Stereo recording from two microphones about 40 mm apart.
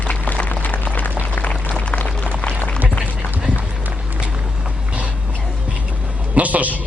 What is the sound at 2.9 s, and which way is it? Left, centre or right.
Run, left.